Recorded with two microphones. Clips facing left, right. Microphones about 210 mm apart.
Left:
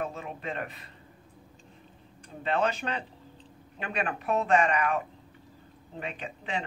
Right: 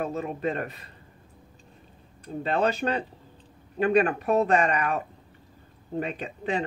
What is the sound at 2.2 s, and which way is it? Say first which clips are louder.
Speech: right 3 dB; 35° right (ahead or behind).